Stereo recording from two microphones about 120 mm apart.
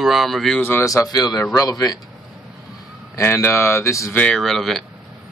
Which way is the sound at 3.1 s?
20° left (ahead or behind).